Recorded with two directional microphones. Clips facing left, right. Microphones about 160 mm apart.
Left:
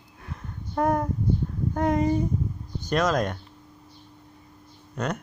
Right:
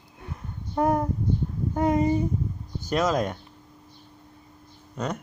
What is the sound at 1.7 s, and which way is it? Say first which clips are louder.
Speech: right 1 dB; 15° right (ahead or behind).